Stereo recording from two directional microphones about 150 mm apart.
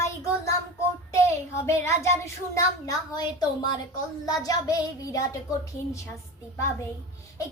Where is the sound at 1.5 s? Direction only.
15° left (ahead or behind).